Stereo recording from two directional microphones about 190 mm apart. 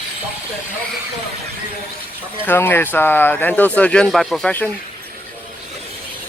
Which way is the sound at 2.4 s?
10° left (ahead or behind).